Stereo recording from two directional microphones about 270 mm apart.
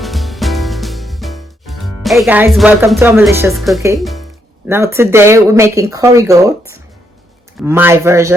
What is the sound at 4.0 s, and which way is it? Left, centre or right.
Speech, centre.